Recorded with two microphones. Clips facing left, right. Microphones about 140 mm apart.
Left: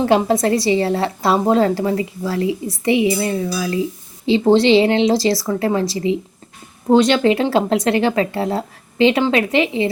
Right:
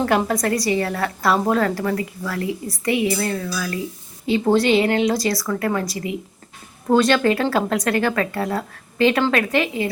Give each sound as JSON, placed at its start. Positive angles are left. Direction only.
{"t": 0.3, "sound": "speech", "side_deg": 25}